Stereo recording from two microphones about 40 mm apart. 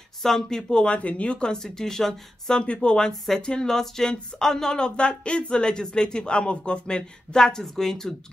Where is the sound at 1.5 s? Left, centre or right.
Centre.